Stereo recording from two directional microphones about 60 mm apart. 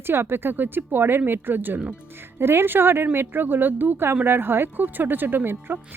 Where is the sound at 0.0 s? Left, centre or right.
Right.